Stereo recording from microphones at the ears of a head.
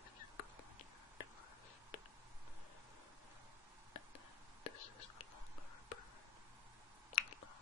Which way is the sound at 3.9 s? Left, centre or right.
Left.